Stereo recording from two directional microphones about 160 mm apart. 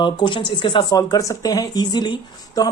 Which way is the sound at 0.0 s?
30° left (ahead or behind).